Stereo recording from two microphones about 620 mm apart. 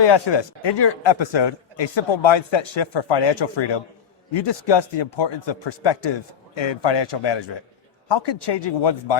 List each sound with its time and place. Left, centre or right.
0.0 s a man's voice: left